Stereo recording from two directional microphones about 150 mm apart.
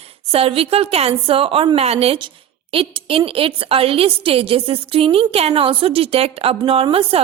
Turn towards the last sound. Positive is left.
turn(degrees=-40)  # may be behind; listen again after turning